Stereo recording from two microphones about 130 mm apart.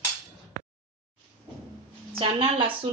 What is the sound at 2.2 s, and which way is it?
Speech, 40° right (ahead or behind).